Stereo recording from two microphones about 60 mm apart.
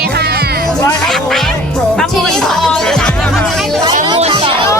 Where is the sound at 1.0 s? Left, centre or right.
Centre.